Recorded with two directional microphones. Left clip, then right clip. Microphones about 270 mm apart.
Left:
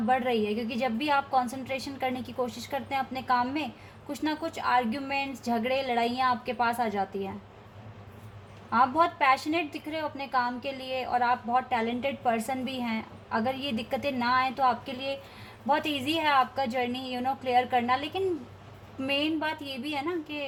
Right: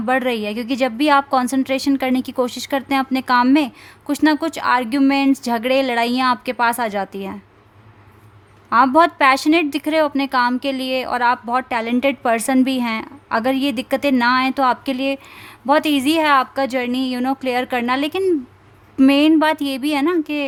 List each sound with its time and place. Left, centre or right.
0.1 s a woman's voice: right
8.7 s a woman's voice: right